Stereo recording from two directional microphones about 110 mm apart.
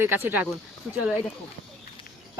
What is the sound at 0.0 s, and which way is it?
Speech, 20° right (ahead or behind).